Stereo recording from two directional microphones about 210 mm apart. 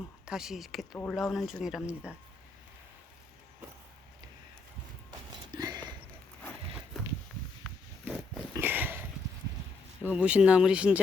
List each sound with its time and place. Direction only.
0.3 s speech: 5° right (ahead or behind)
5.5 s a sound: 20° right (ahead or behind)
7.0 s walk: centre (ahead or behind)
8.1 s dog: 10° right (ahead or behind)
10.0 s speech: 5° right (ahead or behind)